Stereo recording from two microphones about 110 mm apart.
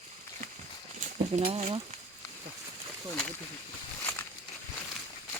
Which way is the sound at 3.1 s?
10° left (ahead or behind).